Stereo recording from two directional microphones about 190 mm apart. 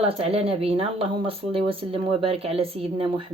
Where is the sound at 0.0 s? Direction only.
30° right (ahead or behind).